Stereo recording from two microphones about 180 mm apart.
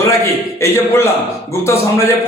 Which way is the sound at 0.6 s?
15° left (ahead or behind).